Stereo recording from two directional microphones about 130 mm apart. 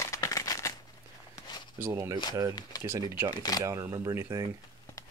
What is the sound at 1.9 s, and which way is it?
Speech, 25° right (ahead or behind).